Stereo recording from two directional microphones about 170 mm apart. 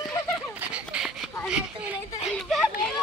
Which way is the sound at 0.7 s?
5° right (ahead or behind).